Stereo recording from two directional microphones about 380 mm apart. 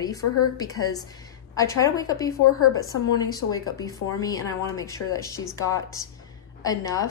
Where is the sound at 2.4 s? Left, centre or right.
Left.